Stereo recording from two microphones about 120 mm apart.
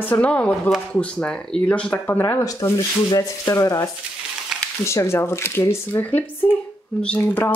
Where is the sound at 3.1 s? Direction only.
25° left (ahead or behind).